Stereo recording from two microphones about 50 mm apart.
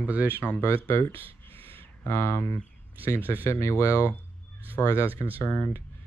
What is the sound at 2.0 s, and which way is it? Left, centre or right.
Speech, left.